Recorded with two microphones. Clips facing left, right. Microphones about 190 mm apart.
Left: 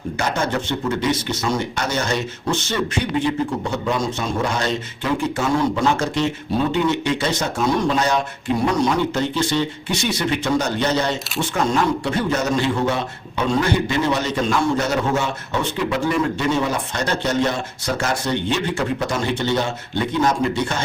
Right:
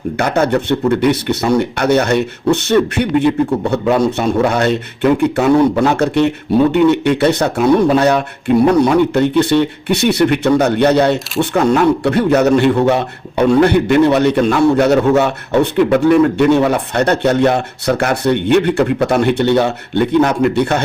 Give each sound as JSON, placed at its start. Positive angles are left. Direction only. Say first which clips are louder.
{"t": 0.2, "sound": "speech", "louder": "right 8 dB", "side_deg": -60}